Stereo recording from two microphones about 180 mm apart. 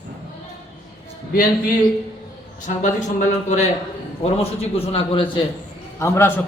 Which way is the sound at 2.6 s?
45° left (ahead or behind).